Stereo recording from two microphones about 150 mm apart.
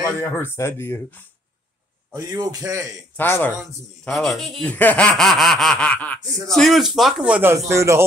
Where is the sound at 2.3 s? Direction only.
25° right (ahead or behind).